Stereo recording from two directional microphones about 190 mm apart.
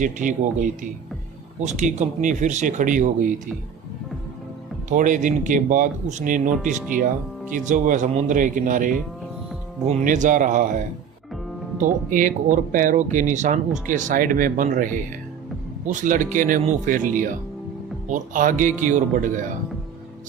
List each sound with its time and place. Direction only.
0.0 s speech: 45° right (ahead or behind)
4.9 s speech: 45° right (ahead or behind)
7.5 s speech: 40° right (ahead or behind)